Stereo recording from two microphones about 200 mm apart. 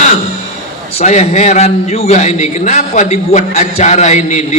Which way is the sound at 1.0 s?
35° left (ahead or behind).